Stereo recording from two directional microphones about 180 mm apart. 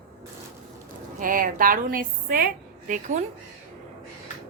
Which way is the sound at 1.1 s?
50° right (ahead or behind).